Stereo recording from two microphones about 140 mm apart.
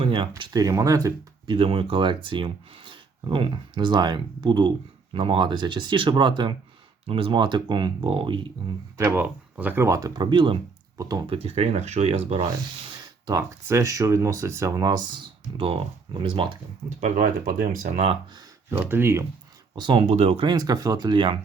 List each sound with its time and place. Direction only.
0.0 s speech: 40° right (ahead or behind); by 1.1 s 25° right (ahead or behind)
1.5 s speech: 40° right (ahead or behind)
9.0 s speech: 15° right (ahead or behind); by 10.6 s 35° right (ahead or behind)
10.9 s speech: 25° right (ahead or behind)
11.3 s speech: 45° right (ahead or behind)
13.2 s speech: 20° right (ahead or behind); by 16.6 s 40° right (ahead or behind)
17.0 s speech: 70° right (ahead or behind)
17.8 s speech: 50° right (ahead or behind)
18.7 s speech: 15° right (ahead or behind)
19.7 s speech: 35° right (ahead or behind)
20.1 s speech: 50° right (ahead or behind)